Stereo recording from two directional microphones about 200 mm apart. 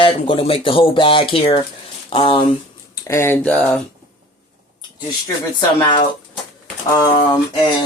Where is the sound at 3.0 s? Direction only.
10° left (ahead or behind).